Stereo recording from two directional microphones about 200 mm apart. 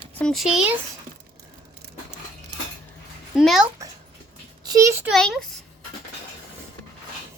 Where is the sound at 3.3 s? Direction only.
5° right (ahead or behind).